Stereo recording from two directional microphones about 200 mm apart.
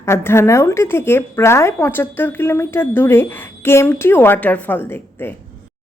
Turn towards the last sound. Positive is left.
turn(degrees=10)  # may be behind; listen again after turning